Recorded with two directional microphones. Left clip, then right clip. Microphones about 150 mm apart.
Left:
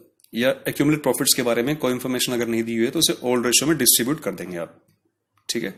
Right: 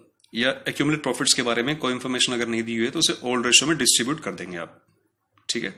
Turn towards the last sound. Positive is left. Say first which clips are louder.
# left 1 dB
turn(degrees=45)  # may be behind; listen again after turning